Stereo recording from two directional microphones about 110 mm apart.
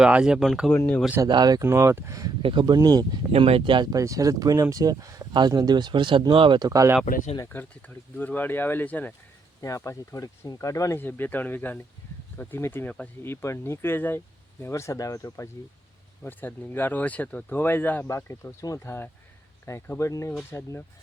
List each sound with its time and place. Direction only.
0.0 s speech: 5° right (ahead or behind)
0.7 s speech: 15° left (ahead or behind)
1.2 s speech: 35° right (ahead or behind)
1.6 s speech: 25° right (ahead or behind)
2.4 s speech: 50° right (ahead or behind)
3.3 s speech: 65° right (ahead or behind)
3.6 s speech: 45° right (ahead or behind)
3.9 s speech: 30° right (ahead or behind); by 6.6 s 50° right (ahead or behind)
6.6 s speech: 30° right (ahead or behind)
7.4 s speech: 15° left (ahead or behind)
9.6 s speech: 30° left (ahead or behind)
11.0 s speech: 15° left (ahead or behind)
13.3 s speech: 25° left (ahead or behind)
16.2 s speech: 15° left (ahead or behind)